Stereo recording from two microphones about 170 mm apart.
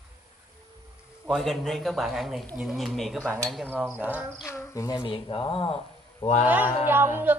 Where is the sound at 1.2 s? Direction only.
Centre (ahead or behind).